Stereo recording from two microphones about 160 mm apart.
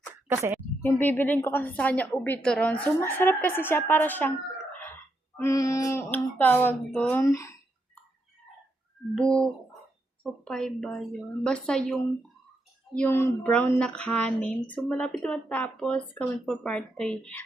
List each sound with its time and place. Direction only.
0.3 s speech: 15° right (ahead or behind)
0.8 s a woman's voice: 10° left (ahead or behind)
5.4 s a woman's voice: 20° left (ahead or behind)
7.3 s speech: 20° left (ahead or behind)
9.1 s a woman's voice: 5° left (ahead or behind)